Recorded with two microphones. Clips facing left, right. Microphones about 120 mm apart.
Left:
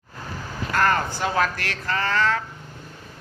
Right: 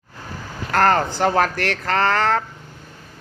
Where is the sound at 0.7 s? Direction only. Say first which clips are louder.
Right 5 dB; 55° right (ahead or behind).